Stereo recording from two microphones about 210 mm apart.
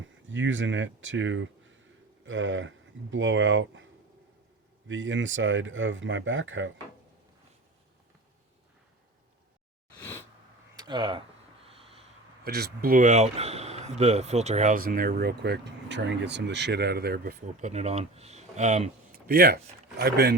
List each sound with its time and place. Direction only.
0.3 s speech: 65° right (ahead or behind)
4.9 s speech: 65° right (ahead or behind)
10.0 s sneeze: 15° left (ahead or behind)
10.8 s speech: 20° right (ahead or behind)
11.6 s a sound: 30° right (ahead or behind)
12.5 s speech: 50° right (ahead or behind)
19.3 s speech: 50° right (ahead or behind)